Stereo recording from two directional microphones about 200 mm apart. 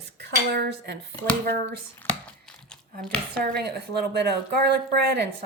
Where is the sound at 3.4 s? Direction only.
55° right (ahead or behind).